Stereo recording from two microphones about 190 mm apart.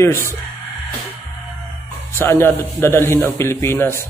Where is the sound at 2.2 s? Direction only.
10° left (ahead or behind).